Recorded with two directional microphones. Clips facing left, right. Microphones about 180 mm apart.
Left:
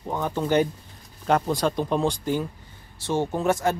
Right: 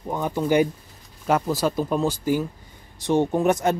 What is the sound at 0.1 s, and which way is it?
Speech, 10° right (ahead or behind).